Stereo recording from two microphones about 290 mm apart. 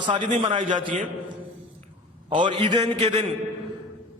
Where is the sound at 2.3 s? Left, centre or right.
Centre.